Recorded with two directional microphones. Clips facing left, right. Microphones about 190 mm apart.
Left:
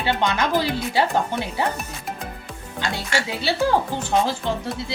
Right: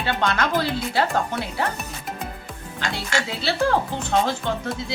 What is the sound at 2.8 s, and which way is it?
Speech, 15° left (ahead or behind).